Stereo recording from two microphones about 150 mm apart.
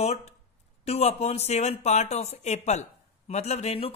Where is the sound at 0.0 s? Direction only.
45° left (ahead or behind).